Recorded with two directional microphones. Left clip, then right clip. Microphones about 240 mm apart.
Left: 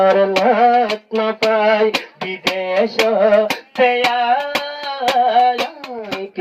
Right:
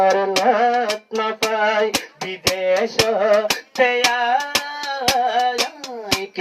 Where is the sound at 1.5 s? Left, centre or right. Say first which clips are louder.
Left 5 dB; left.